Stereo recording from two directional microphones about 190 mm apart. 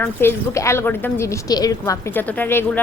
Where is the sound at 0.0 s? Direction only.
10° left (ahead or behind).